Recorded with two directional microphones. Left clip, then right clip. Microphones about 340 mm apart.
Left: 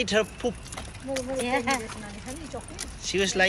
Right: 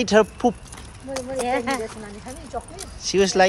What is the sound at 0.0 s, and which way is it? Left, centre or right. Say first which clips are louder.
Speech: right 7 dB; centre.